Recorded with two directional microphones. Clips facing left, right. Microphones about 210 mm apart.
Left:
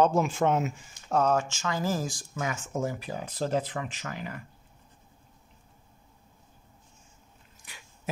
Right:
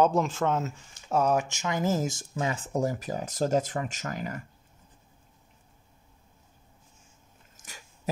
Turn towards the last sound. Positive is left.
turn(degrees=-45)  # may be behind; listen again after turning